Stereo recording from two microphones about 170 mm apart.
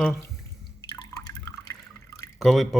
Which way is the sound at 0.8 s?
20° left (ahead or behind).